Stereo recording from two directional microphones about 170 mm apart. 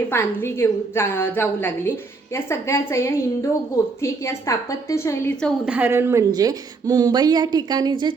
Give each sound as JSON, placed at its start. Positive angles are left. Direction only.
{"t": 0.1, "sound": "a woman's voice", "side_deg": 15}
{"t": 5.6, "sound": "a woman's voice", "side_deg": -10}